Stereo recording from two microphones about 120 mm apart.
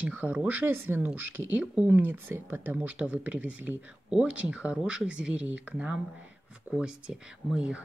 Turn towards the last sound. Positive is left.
turn(degrees=-10)  # may be behind; listen again after turning